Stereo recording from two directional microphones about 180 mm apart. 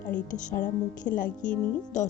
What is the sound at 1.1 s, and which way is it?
Speech, 45° left (ahead or behind).